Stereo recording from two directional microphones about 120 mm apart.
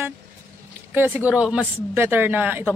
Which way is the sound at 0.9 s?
15° right (ahead or behind).